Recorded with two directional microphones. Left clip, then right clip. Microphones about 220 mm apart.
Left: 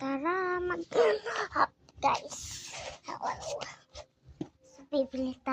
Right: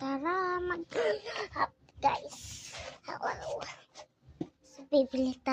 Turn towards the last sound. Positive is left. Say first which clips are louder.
# right 2 dB
turn(degrees=-15)  # may be behind; listen again after turning